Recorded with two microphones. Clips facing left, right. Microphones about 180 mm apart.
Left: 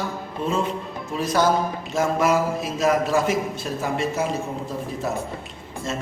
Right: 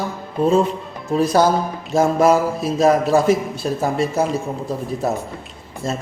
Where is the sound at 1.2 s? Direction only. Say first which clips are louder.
Right 4 dB; 35° right (ahead or behind).